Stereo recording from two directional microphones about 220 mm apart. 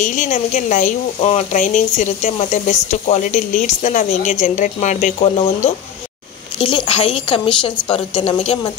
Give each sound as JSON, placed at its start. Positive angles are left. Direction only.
{"t": 0.0, "sound": "speech", "side_deg": 35}